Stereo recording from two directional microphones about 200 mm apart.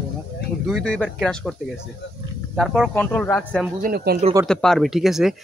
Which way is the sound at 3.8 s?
50° right (ahead or behind).